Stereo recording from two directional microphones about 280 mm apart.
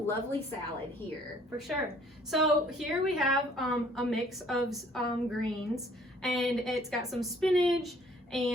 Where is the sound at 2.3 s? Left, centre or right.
Centre.